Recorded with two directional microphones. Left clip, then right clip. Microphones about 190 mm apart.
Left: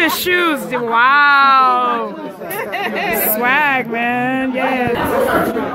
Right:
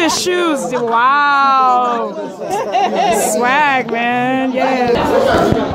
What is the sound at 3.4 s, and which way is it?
Speech, 5° left (ahead or behind).